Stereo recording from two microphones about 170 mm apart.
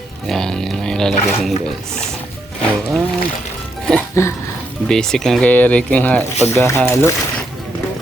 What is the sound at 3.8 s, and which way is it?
Music, 5° left (ahead or behind).